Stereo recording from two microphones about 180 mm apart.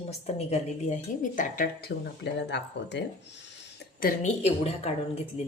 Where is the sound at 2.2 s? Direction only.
75° left (ahead or behind).